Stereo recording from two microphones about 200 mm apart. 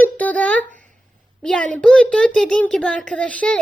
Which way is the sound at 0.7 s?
40° right (ahead or behind).